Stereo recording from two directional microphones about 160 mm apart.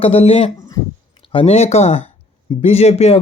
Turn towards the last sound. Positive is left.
turn(degrees=40)  # may be behind; listen again after turning